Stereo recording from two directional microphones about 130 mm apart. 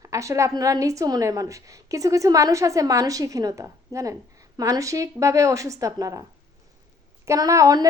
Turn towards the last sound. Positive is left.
turn(degrees=-25)  # may be behind; listen again after turning